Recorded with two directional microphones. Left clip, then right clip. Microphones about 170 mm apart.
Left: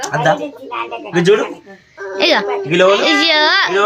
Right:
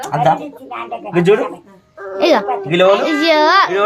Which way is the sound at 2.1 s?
5° right (ahead or behind).